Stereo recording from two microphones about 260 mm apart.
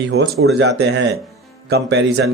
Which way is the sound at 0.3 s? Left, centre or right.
Right.